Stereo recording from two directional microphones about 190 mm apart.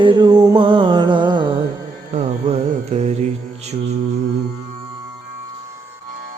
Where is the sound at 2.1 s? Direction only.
35° right (ahead or behind).